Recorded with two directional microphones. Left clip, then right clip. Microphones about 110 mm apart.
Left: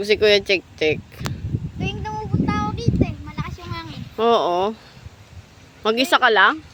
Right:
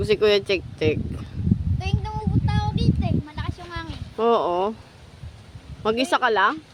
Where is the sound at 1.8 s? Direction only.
5° right (ahead or behind).